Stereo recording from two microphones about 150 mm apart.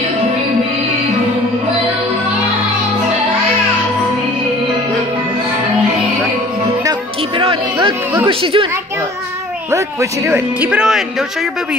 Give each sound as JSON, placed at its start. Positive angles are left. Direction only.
{"t": 7.3, "sound": "music", "side_deg": -35}
{"t": 8.3, "sound": "speech", "side_deg": -35}
{"t": 9.7, "sound": "speech", "side_deg": -20}